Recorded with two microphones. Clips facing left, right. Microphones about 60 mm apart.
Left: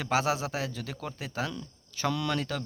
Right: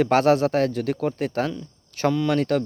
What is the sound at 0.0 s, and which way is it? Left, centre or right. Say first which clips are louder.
Speech: right 10 dB; right.